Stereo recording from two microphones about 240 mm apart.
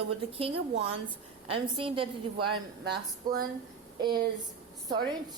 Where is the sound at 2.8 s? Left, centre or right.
Right.